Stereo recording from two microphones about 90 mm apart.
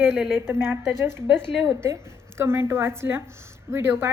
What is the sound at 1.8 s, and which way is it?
A woman's voice, 30° right (ahead or behind).